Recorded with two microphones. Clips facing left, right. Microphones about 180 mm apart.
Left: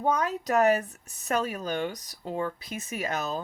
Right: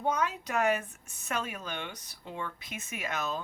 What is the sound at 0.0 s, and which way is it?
Speech, 40° left (ahead or behind).